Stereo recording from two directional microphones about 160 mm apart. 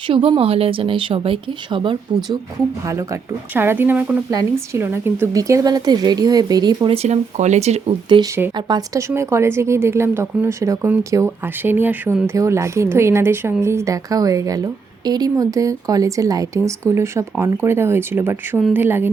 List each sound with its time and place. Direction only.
0.1 s speech: 35° right (ahead or behind)
2.8 s a woman's voice: 20° right (ahead or behind)
6.9 s speech: 45° right (ahead or behind)
8.5 s a woman's voice: 25° right (ahead or behind)